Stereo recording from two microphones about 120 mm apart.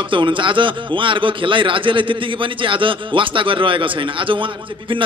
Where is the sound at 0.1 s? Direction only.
45° right (ahead or behind).